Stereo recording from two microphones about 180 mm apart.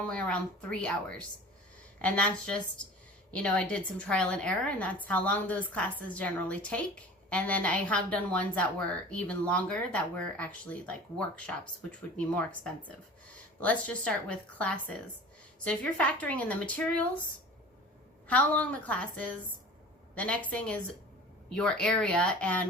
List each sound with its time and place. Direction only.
0.0 s a woman's voice: 5° left (ahead or behind)
18.3 s a woman's voice: 10° left (ahead or behind)